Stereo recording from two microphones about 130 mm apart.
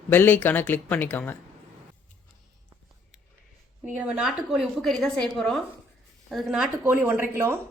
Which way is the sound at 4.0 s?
10° right (ahead or behind).